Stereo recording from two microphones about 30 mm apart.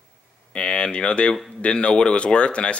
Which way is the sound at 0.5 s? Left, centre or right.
Left.